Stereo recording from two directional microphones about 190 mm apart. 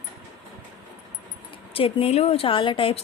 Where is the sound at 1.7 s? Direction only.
30° left (ahead or behind).